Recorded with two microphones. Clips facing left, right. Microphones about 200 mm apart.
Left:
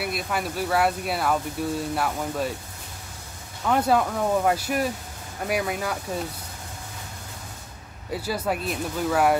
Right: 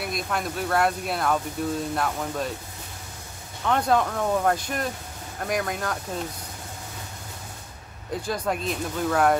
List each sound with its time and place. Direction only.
0.0 s speech: 5° left (ahead or behind)
3.6 s speech: 5° left (ahead or behind)
8.1 s speech: 5° left (ahead or behind)